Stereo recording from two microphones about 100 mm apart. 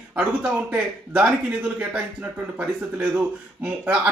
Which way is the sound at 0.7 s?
15° right (ahead or behind).